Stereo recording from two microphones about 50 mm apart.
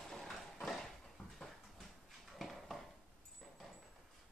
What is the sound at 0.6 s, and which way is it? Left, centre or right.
Clip-clop, centre.